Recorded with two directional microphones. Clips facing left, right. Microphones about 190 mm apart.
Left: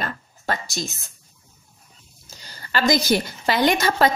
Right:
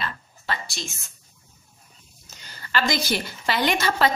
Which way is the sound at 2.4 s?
40° left (ahead or behind).